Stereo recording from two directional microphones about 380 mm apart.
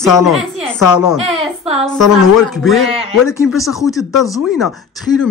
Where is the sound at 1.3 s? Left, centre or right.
Centre.